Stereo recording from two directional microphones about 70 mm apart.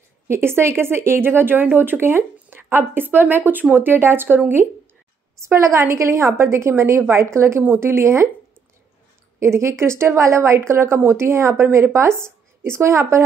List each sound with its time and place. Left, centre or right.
0.3 s speech: right
4.6 s a woman's voice: left
5.4 s speech: right
9.4 s a woman's voice: right